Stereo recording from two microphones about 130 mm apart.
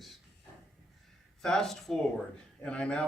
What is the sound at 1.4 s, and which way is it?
Speech, 5° left (ahead or behind).